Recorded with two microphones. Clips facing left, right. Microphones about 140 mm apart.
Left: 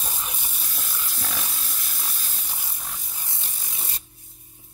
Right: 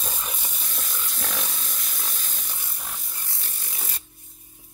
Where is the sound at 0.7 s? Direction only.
5° left (ahead or behind).